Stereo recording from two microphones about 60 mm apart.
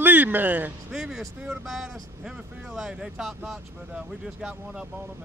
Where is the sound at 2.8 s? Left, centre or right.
Centre.